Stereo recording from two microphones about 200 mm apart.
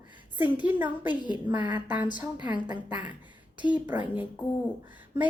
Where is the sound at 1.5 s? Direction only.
20° right (ahead or behind).